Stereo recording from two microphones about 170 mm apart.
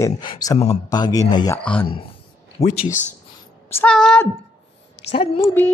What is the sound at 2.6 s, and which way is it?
Speech, 40° left (ahead or behind).